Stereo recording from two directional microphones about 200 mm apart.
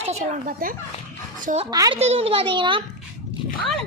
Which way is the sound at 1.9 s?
30° right (ahead or behind).